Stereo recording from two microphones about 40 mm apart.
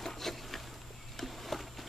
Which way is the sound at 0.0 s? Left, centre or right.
Centre.